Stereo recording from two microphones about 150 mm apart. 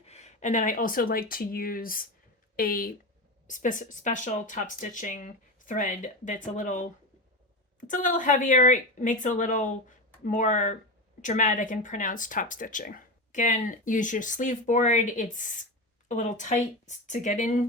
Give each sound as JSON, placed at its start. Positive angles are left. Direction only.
{"t": 0.0, "sound": "speech", "side_deg": 50}
{"t": 3.4, "sound": "speech", "side_deg": 60}